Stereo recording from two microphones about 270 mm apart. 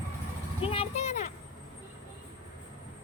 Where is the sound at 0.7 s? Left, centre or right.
Left.